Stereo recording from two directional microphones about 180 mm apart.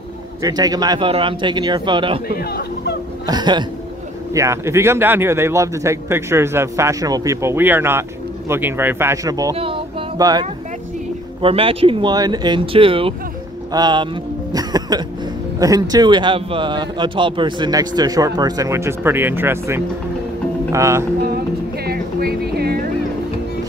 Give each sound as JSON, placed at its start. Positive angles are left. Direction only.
{"t": 0.4, "sound": "a man's voice", "side_deg": -20}
{"t": 2.2, "sound": "speech", "side_deg": 60}
{"t": 3.3, "sound": "a man's voice", "side_deg": -25}
{"t": 9.6, "sound": "music", "side_deg": -30}
{"t": 11.4, "sound": "a man's voice", "side_deg": -30}
{"t": 14.5, "sound": "music", "side_deg": -20}
{"t": 15.6, "sound": "a man's voice", "side_deg": -20}
{"t": 21.8, "sound": "a sound", "side_deg": -60}